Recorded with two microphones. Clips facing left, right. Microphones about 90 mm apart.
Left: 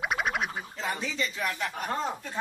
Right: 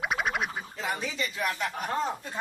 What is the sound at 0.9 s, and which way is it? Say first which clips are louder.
Speech: even; 10° right (ahead or behind).